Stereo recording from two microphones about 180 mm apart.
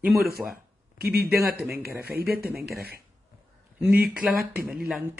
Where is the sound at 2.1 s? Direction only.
60° right (ahead or behind).